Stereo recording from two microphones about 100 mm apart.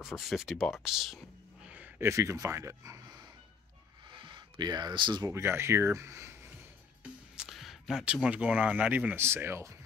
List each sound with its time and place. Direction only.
0.0 s speech: centre (ahead or behind)
1.7 s a sound: 15° right (ahead or behind)
2.0 s speech: 30° right (ahead or behind)
4.1 s a sound: 50° right (ahead or behind)
5.2 s speech: 25° right (ahead or behind)
7.0 s speech: 5° right (ahead or behind); by 9.8 s 30° right (ahead or behind)